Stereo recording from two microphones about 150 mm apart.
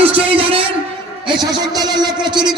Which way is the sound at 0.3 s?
40° right (ahead or behind).